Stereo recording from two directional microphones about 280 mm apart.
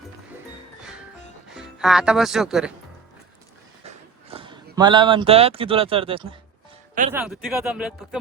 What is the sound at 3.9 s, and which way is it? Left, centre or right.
Speech, centre.